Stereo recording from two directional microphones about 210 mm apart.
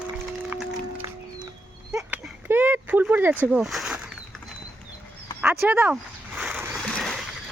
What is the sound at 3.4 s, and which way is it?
Speech, 5° right (ahead or behind).